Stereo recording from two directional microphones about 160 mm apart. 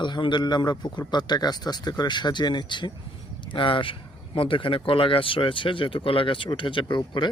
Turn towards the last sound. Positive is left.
turn(degrees=30)  # may be behind; listen again after turning